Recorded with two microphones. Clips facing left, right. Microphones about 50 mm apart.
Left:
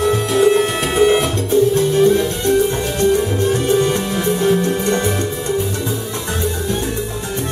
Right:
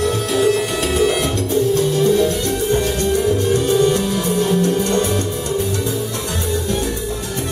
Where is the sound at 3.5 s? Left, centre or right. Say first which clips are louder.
Even; left.